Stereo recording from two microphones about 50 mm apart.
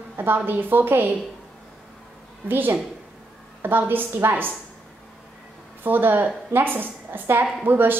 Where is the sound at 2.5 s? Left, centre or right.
Right.